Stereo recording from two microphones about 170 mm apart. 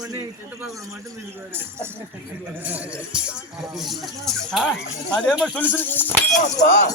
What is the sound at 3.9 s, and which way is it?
Speech, centre (ahead or behind).